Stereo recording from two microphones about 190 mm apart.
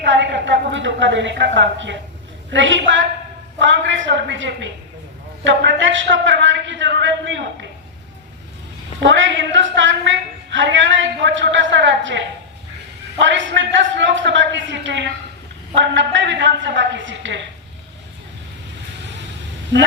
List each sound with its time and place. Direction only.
0.0 s a woman's voice: 70° right (ahead or behind)
9.0 s a woman's voice: 75° right (ahead or behind)